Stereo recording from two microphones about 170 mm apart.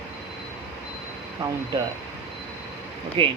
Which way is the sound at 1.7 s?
25° right (ahead or behind).